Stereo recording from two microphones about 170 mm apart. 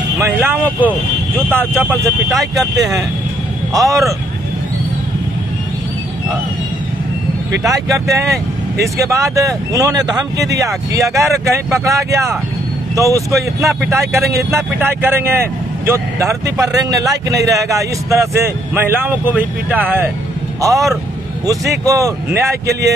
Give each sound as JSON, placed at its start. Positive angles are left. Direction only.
{"t": 0.2, "sound": "speech", "side_deg": -10}
{"t": 3.7, "sound": "speech", "side_deg": -20}
{"t": 7.6, "sound": "speech", "side_deg": -20}